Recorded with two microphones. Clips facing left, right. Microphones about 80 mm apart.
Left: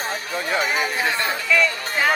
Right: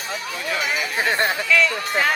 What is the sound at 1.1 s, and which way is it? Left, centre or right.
Speech, right.